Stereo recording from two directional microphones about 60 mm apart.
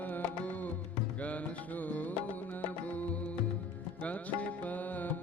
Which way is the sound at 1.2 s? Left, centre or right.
Left.